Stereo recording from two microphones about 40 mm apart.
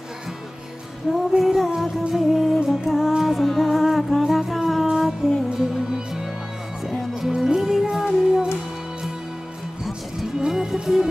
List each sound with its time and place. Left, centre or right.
1.1 s child singing: centre
1.4 s music: centre
3.1 s music: centre
3.3 s humming: centre
4.3 s music: centre
10.4 s music: centre